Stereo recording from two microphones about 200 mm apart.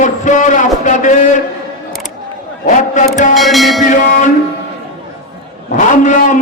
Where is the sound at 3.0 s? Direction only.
40° left (ahead or behind).